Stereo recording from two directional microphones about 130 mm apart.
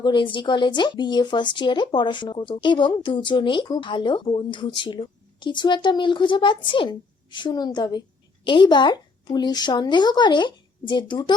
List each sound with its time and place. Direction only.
0.0 s speech: 40° left (ahead or behind)